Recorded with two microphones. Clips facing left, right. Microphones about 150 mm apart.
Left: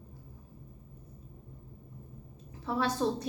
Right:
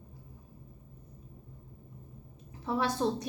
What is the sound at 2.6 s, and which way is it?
Speech, 20° right (ahead or behind).